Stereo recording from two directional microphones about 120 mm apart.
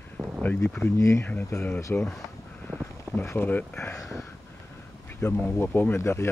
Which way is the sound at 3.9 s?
Centre (ahead or behind).